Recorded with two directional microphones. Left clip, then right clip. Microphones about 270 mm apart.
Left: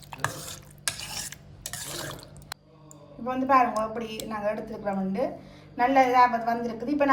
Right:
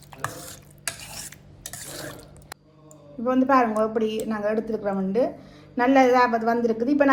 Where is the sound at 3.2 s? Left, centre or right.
Centre.